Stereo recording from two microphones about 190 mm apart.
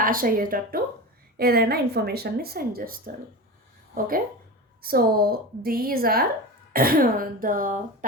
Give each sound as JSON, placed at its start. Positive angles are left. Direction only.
{"t": 0.0, "sound": "a woman's voice", "side_deg": -50}